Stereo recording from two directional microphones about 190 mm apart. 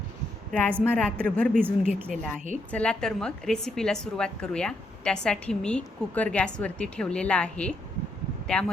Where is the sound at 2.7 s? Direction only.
5° left (ahead or behind).